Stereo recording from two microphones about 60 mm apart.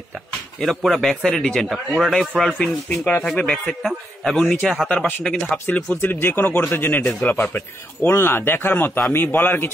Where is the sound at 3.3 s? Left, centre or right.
Centre.